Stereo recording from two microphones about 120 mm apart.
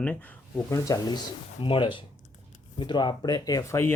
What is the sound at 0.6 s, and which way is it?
Speech, 30° left (ahead or behind).